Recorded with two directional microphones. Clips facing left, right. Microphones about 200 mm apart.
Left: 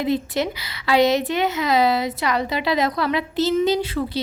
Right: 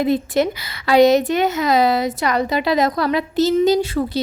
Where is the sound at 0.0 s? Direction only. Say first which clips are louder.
Right 4 dB; 50° right (ahead or behind).